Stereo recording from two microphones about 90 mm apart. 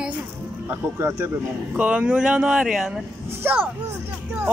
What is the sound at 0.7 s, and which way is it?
Speech, 30° right (ahead or behind).